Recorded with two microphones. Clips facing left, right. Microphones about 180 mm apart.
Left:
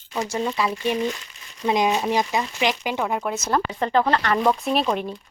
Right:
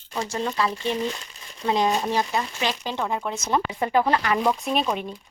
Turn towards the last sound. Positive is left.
turn(degrees=0)  # may be behind; listen again after turning